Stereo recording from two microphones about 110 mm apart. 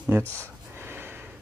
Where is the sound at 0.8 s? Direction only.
20° right (ahead or behind).